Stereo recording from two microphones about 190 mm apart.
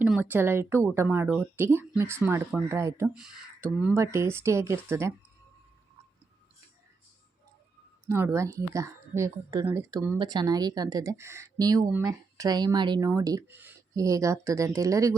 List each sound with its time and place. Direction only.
0.0 s a woman's voice: 10° right (ahead or behind)
8.0 s speech: 15° right (ahead or behind)